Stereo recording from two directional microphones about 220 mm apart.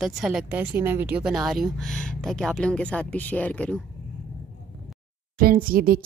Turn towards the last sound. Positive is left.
turn(degrees=-40)  # may be behind; listen again after turning